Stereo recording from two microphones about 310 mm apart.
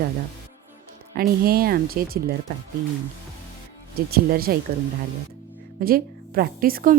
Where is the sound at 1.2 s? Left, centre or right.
Right.